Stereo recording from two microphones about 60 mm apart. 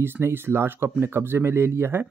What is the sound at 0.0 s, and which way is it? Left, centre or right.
Speech, right.